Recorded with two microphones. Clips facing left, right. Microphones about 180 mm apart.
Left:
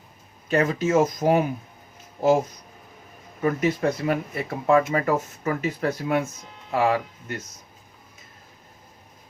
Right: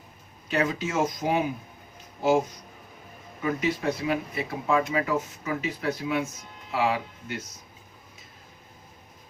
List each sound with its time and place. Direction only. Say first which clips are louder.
0.4 s speech: left 5 dB; 45° left (ahead or behind)
3.4 s speech: left 4 dB; 50° left (ahead or behind)